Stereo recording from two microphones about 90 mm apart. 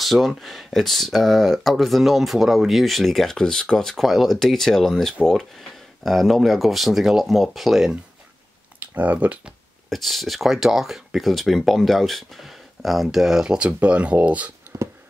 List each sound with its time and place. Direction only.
0.0 s speech: centre (ahead or behind)
8.9 s speech: 15° right (ahead or behind)
9.8 s speech: centre (ahead or behind); by 14.5 s 15° right (ahead or behind)